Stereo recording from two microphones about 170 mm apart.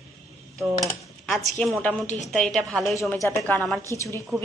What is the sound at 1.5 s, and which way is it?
A woman's voice, 5° left (ahead or behind).